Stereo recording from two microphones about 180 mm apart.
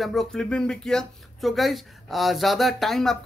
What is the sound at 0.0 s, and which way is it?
Speech, centre (ahead or behind).